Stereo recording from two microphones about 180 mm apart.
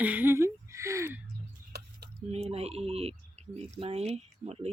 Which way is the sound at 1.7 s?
65° right (ahead or behind).